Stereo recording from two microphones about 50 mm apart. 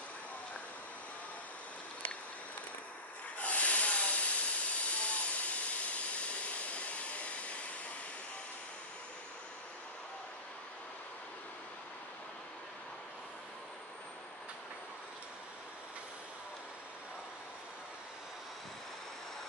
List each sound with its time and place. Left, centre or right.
3.3 s hiss: left